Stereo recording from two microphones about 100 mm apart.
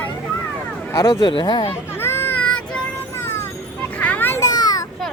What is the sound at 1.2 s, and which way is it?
Speech, 50° left (ahead or behind).